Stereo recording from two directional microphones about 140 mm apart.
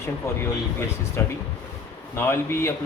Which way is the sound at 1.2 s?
15° left (ahead or behind).